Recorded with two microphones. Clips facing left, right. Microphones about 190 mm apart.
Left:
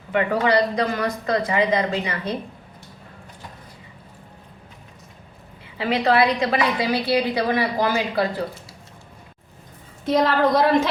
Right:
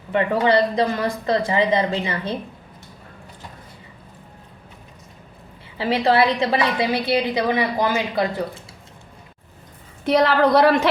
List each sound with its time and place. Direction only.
0.1 s a woman's voice: 25° right (ahead or behind)
5.7 s a woman's voice: 30° right (ahead or behind)
10.1 s a woman's voice: 70° right (ahead or behind)